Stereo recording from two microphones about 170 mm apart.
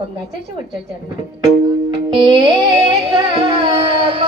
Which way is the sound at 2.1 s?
30° right (ahead or behind).